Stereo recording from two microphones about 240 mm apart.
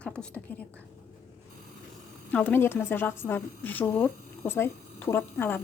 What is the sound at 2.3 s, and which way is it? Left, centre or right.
A woman's voice, centre.